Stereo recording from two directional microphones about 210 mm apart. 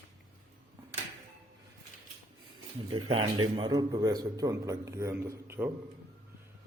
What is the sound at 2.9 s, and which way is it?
A man's voice, 25° right (ahead or behind).